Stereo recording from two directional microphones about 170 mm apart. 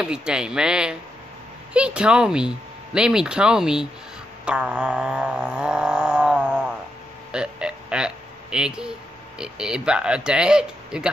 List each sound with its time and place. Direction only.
0.0 s speech: 5° right (ahead or behind)
4.5 s a sound: 5° right (ahead or behind)
9.4 s speech: 5° right (ahead or behind)